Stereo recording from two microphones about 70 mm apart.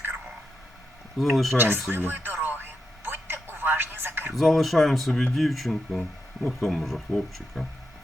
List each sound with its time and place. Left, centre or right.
1.2 s speech: centre
1.5 s speech: right
1.9 s music: right
4.3 s speech: centre